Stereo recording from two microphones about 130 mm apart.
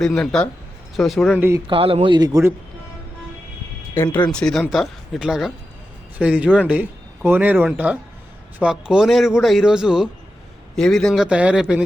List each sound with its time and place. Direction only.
0.0 s a man's voice: 5° left (ahead or behind)
1.4 s speech: 20° right (ahead or behind)
1.6 s a man's voice: 45° right (ahead or behind)
4.0 s speech: 15° left (ahead or behind)
4.3 s a man's voice: 5° left (ahead or behind)